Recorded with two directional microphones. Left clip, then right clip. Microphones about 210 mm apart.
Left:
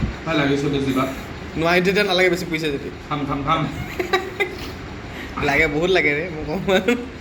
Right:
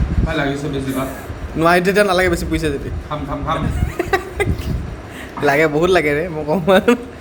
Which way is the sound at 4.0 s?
55° right (ahead or behind).